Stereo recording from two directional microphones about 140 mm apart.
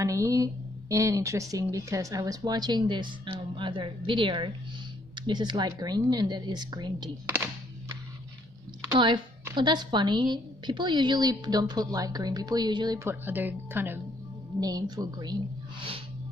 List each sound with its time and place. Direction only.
0.0 s a woman's voice: 20° right (ahead or behind)
8.9 s a woman's voice: 35° right (ahead or behind)
13.0 s speech: 15° right (ahead or behind)
14.6 s a woman's voice: 25° right (ahead or behind)